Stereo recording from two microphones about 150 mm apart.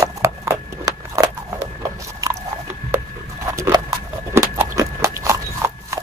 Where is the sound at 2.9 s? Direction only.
20° right (ahead or behind).